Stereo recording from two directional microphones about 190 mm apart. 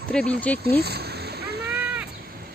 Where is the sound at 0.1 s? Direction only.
5° left (ahead or behind).